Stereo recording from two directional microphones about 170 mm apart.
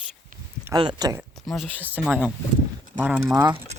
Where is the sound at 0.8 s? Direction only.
25° right (ahead or behind).